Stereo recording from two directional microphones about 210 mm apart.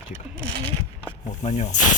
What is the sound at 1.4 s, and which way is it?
Speech, 35° left (ahead or behind).